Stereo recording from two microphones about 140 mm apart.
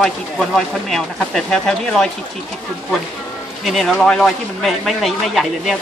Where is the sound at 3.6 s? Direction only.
Centre (ahead or behind).